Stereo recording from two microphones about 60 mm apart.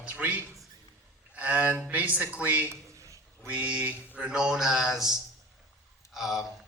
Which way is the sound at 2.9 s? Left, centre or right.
Right.